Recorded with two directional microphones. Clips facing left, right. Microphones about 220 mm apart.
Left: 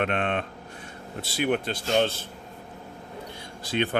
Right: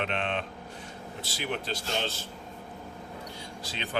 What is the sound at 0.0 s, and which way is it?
Speech, 55° left (ahead or behind).